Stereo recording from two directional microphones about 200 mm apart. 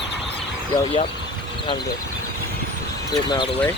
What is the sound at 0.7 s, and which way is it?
Speech, 30° left (ahead or behind).